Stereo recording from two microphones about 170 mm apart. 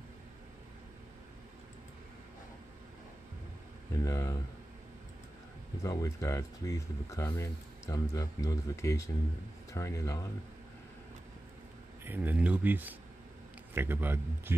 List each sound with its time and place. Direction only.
3.9 s speech: 15° left (ahead or behind)
5.8 s speech: 20° left (ahead or behind)
12.0 s speech: 10° right (ahead or behind)